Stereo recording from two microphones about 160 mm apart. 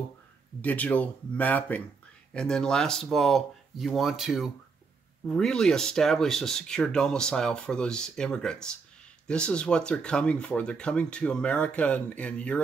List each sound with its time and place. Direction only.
0.6 s speech: 10° left (ahead or behind)